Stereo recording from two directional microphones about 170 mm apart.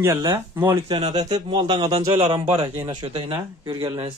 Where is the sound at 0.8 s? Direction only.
30° right (ahead or behind).